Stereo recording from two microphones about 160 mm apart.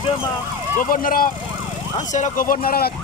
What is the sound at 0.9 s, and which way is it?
Speech, 60° left (ahead or behind).